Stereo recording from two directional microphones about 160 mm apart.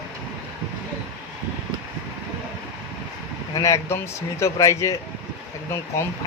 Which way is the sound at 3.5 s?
20° left (ahead or behind).